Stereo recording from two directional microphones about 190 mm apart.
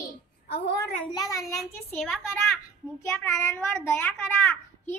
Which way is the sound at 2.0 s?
Centre (ahead or behind).